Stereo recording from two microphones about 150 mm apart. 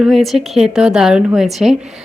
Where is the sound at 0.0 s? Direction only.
Centre (ahead or behind).